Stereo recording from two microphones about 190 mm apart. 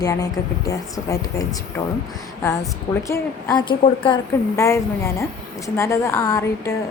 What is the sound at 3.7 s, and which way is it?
A woman's voice, 25° left (ahead or behind).